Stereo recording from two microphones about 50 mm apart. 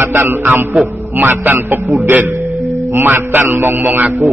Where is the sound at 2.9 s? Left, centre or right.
Right.